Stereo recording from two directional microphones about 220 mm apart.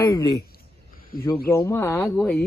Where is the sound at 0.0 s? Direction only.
15° left (ahead or behind).